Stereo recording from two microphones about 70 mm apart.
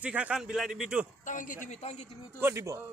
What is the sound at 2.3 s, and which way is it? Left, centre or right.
Speech, right.